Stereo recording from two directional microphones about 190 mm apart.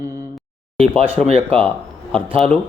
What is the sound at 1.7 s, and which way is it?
Speech, 5° left (ahead or behind).